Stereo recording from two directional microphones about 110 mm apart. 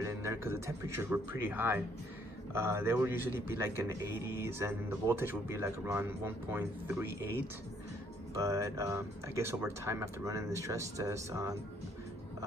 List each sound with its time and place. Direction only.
0.0 s a man's voice: 25° right (ahead or behind)
8.4 s a man's voice: 30° right (ahead or behind)